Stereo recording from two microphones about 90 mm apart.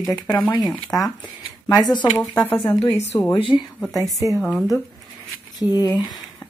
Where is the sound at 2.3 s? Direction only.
30° left (ahead or behind).